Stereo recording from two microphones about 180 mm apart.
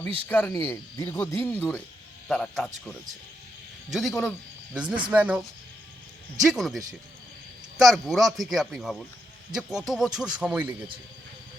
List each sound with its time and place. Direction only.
0.3 s speech: 10° left (ahead or behind)
3.9 s a man's voice: centre (ahead or behind)